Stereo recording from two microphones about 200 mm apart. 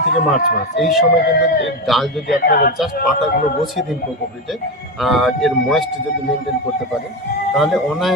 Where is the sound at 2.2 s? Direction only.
50° left (ahead or behind).